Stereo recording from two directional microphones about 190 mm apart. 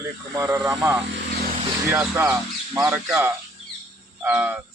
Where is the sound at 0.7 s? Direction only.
10° right (ahead or behind).